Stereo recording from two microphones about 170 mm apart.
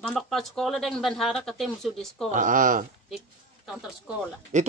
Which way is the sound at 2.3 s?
50° right (ahead or behind).